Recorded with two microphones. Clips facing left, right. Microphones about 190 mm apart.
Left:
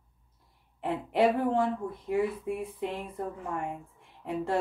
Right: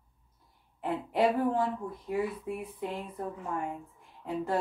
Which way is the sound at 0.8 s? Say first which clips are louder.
Left 2 dB; 30° left (ahead or behind).